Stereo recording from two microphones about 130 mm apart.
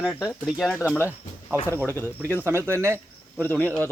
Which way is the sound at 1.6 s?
15° right (ahead or behind).